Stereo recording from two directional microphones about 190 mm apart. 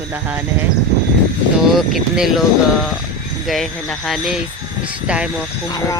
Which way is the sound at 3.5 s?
Centre (ahead or behind).